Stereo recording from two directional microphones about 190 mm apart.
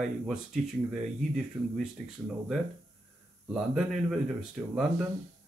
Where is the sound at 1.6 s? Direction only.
10° right (ahead or behind).